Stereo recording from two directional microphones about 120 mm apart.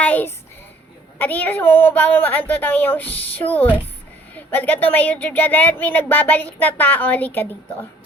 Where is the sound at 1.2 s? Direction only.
15° left (ahead or behind).